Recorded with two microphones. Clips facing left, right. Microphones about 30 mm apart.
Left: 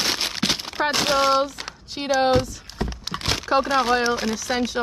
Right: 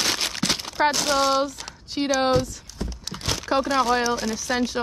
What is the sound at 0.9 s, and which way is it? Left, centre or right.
Speech, left.